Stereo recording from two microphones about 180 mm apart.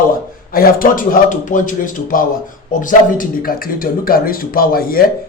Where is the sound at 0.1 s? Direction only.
55° left (ahead or behind).